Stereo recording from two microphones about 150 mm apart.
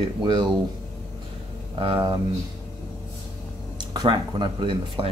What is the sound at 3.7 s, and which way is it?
Speech, 30° right (ahead or behind).